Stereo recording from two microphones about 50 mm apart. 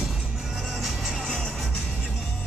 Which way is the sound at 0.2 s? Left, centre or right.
Centre.